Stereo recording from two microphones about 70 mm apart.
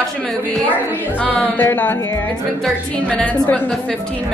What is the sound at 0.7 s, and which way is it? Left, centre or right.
A woman's voice, left.